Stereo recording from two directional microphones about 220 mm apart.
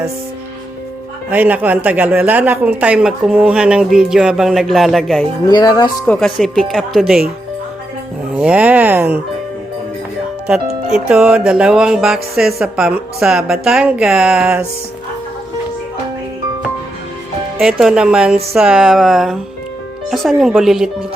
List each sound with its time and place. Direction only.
1.3 s speech: 5° right (ahead or behind)
5.5 s speech: 15° left (ahead or behind)
6.1 s speech: centre (ahead or behind)
8.4 s speech: 5° right (ahead or behind)
10.9 s speech: 5° right (ahead or behind)
17.6 s speech: centre (ahead or behind)